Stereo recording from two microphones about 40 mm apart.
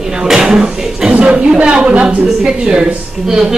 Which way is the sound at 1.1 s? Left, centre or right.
Right.